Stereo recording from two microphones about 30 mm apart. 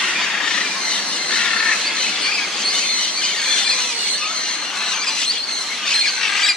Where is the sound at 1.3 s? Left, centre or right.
Left.